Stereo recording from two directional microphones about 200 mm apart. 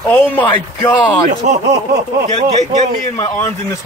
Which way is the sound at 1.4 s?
40° right (ahead or behind).